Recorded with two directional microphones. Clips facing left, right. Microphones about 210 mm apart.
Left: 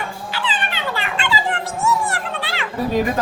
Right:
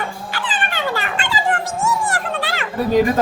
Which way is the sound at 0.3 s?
50° right (ahead or behind).